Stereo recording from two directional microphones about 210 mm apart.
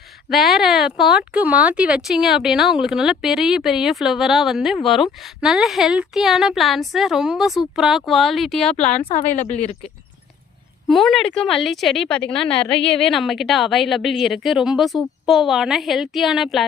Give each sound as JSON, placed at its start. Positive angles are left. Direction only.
{"t": 0.3, "sound": "speech", "side_deg": 0}
{"t": 8.7, "sound": "speech", "side_deg": 30}
{"t": 10.8, "sound": "speech", "side_deg": 0}